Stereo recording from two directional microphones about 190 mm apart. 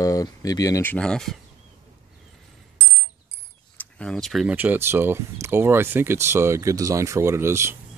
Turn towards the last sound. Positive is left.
turn(degrees=-15)  # may be behind; listen again after turning